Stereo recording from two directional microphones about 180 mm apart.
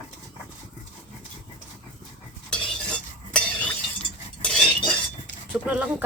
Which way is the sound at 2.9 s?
5° left (ahead or behind).